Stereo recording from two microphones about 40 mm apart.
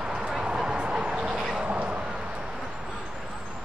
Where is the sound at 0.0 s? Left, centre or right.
Right.